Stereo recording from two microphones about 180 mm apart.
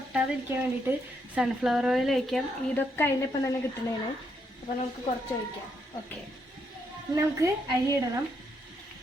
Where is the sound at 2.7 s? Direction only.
10° left (ahead or behind).